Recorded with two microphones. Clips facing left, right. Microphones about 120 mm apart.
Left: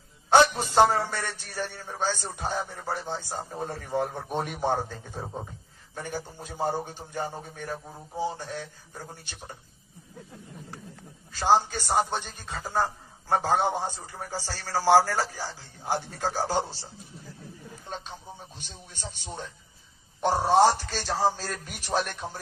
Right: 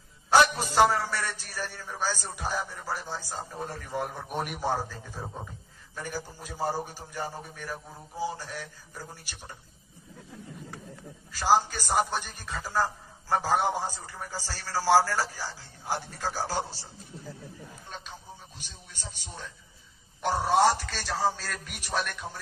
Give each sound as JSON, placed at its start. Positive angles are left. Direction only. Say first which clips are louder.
{"t": 0.3, "sound": "a man's voice", "louder": "left 2 dB", "side_deg": 25}
{"t": 11.3, "sound": "a man's voice", "louder": "left 1 dB", "side_deg": 25}
{"t": 17.8, "sound": "a sound", "louder": "left 6 dB", "side_deg": 30}
{"t": 18.9, "sound": "a man's voice", "louder": "left 5 dB", "side_deg": 30}